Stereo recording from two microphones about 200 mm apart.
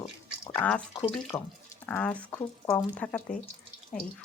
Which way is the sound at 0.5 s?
5° left (ahead or behind).